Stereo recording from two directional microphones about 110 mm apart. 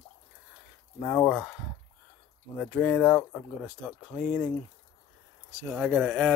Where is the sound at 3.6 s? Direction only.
10° right (ahead or behind).